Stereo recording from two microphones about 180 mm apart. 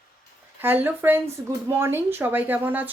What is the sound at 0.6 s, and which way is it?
Speech, 10° right (ahead or behind).